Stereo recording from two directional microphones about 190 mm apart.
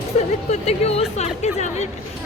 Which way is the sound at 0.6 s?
35° left (ahead or behind).